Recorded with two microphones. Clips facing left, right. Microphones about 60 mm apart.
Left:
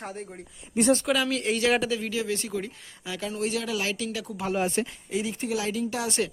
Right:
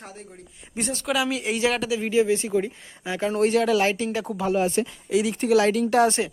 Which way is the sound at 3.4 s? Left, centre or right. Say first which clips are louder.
Right 10 dB; right.